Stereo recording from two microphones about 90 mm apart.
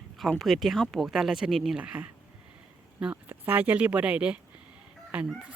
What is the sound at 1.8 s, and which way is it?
Speech, 20° right (ahead or behind).